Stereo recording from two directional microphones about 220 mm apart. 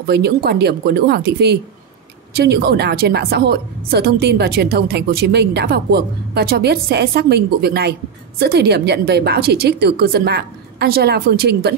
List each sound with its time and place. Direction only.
0.0 s a woman's voice: 45° right (ahead or behind)